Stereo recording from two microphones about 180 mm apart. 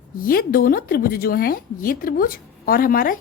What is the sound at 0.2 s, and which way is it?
A woman's voice, 55° left (ahead or behind).